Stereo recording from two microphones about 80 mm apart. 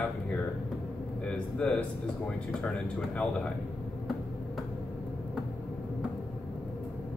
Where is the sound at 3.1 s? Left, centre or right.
Centre.